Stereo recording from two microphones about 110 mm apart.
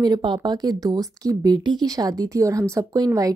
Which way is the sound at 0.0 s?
45° right (ahead or behind).